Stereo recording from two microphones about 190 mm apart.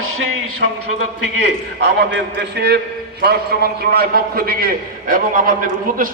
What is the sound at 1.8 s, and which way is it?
A man's voice, 65° right (ahead or behind).